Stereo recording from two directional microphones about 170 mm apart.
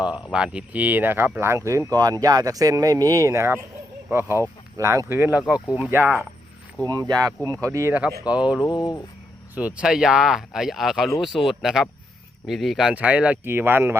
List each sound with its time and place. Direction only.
0.3 s speech: 5° right (ahead or behind)
8.6 s speech: 25° left (ahead or behind)
9.6 s speech: 5° right (ahead or behind)